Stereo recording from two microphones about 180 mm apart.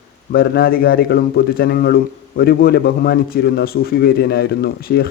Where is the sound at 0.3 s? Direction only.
55° left (ahead or behind).